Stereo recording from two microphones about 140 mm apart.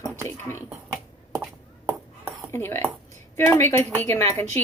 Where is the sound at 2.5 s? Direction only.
20° left (ahead or behind).